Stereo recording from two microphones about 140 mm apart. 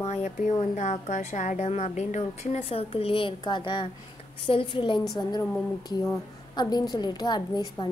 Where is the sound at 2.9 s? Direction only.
40° left (ahead or behind).